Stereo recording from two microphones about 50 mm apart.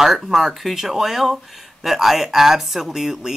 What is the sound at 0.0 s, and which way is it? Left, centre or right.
Speech, centre.